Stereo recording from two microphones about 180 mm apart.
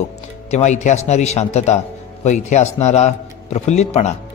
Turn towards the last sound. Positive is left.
turn(degrees=35)  # may be behind; listen again after turning